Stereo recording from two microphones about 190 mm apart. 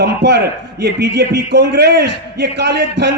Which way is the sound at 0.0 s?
65° right (ahead or behind).